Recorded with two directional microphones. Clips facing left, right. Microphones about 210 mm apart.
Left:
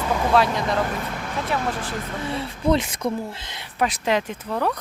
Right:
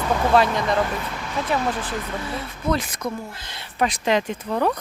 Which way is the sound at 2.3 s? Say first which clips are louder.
Left 4 dB; 30° left (ahead or behind).